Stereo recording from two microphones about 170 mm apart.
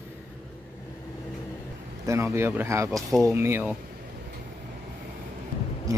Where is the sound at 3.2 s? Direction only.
15° right (ahead or behind).